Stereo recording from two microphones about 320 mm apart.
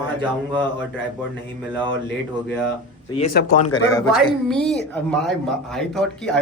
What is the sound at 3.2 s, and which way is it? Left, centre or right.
Speech, left.